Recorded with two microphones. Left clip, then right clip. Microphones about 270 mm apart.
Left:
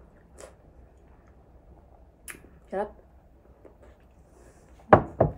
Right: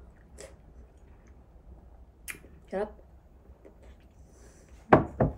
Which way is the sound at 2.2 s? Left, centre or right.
Centre.